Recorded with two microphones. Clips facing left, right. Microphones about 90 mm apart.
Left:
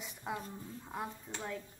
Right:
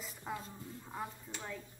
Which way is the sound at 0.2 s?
10° left (ahead or behind).